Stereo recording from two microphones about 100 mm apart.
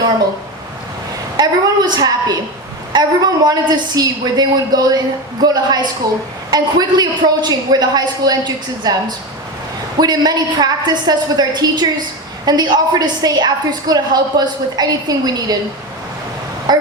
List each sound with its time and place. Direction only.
1.4 s a woman's voice: 40° right (ahead or behind)
16.7 s vehicle: 45° right (ahead or behind)